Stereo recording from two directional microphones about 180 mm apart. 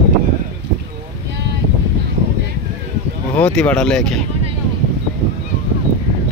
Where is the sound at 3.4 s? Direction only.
5° left (ahead or behind).